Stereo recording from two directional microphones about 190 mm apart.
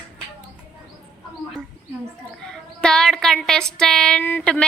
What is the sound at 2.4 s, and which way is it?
Speech, 5° left (ahead or behind).